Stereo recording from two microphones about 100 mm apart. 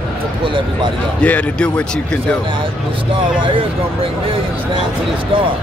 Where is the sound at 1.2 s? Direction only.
10° left (ahead or behind).